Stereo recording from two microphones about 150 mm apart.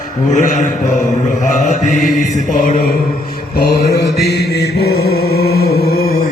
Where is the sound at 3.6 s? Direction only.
90° left.